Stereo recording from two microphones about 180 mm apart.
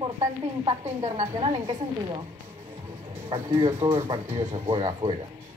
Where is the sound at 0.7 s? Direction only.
30° right (ahead or behind).